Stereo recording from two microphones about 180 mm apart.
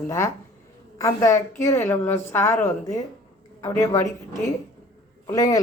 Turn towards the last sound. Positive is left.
turn(degrees=20)  # may be behind; listen again after turning